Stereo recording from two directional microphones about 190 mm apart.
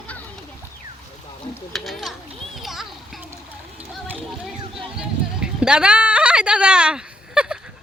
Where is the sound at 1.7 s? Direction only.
Centre (ahead or behind).